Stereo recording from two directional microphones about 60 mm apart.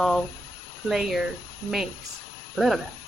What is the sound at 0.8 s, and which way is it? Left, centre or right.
Speech, centre.